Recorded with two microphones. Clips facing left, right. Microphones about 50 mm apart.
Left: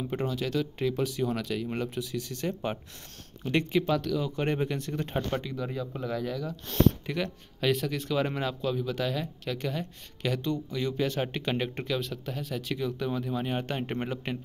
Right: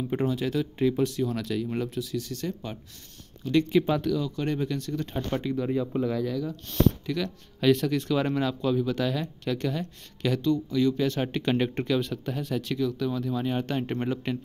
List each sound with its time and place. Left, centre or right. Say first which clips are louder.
0.1 s speech: right 3 dB; centre
1.1 s speech: right 2 dB; centre
3.8 s speech: right 2 dB; centre
4.2 s speech: even; left
5.4 s speech: right 7 dB; centre
6.3 s speech: right 4 dB; centre
7.1 s speech: right 2 dB; left
7.6 s speech: right 5 dB; centre
10.4 s speech: right 7 dB; left
11.1 s speech: right 4 dB; centre
12.7 s speech: right 2 dB; centre